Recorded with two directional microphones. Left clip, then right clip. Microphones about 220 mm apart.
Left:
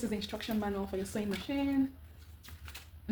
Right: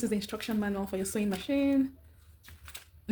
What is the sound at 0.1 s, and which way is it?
Speech, 50° right (ahead or behind).